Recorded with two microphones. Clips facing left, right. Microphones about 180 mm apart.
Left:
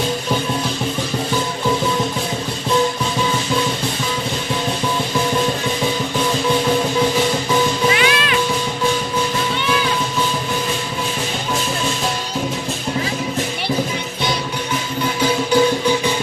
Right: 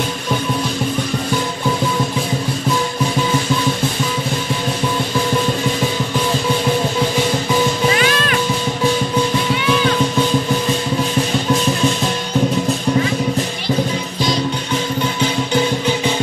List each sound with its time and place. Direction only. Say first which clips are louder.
7.9 s music: right 1 dB; 45° right (ahead or behind)